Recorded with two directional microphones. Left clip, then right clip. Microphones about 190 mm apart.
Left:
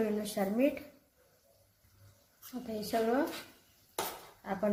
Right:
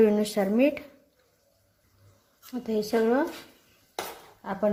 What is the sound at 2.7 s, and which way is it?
Speech, 55° right (ahead or behind).